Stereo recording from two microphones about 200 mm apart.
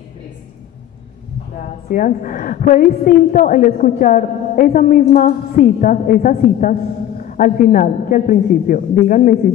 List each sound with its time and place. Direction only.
1.9 s a woman's voice: 40° left (ahead or behind)